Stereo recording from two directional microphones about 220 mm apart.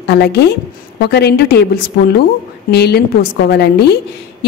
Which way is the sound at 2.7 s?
45° left (ahead or behind).